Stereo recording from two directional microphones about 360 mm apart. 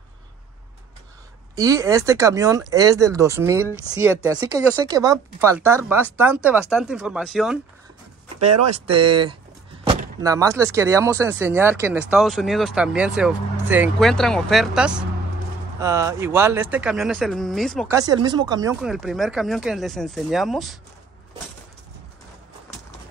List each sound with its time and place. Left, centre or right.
1.5 s speech: centre
8.4 s speech: right
8.7 s speech: centre